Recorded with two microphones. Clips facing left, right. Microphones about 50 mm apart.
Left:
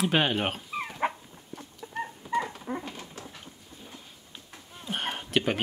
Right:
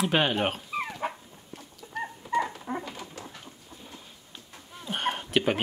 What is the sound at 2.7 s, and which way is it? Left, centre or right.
Dog, centre.